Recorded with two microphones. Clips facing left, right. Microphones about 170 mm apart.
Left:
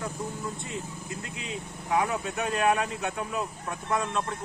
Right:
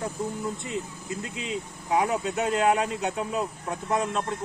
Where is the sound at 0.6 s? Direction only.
20° right (ahead or behind).